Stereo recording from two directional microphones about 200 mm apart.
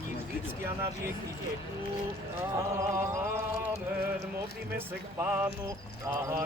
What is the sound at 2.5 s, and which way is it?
Mantra, 15° right (ahead or behind).